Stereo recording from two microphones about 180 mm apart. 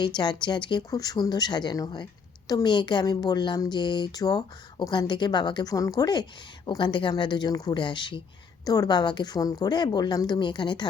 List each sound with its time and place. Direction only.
0.0 s speech: 25° left (ahead or behind)